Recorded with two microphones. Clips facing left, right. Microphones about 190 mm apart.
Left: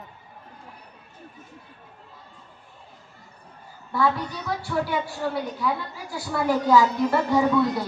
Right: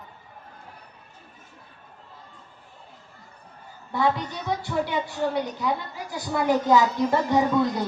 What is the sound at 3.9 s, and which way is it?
A woman's voice, 20° right (ahead or behind).